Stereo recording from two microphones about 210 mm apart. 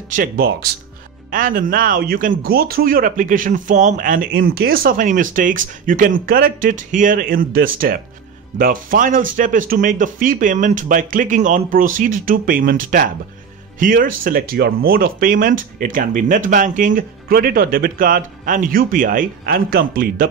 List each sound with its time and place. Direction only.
0.1 s speech: 45° right (ahead or behind)